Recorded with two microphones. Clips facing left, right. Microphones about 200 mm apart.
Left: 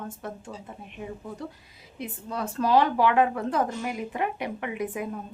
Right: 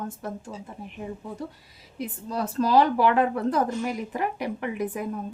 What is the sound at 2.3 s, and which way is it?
Speech, 35° right (ahead or behind).